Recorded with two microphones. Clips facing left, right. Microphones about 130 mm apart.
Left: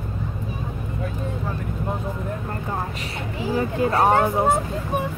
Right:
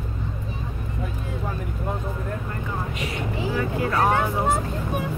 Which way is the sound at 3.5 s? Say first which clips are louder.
Left 5 dB; 25° left (ahead or behind).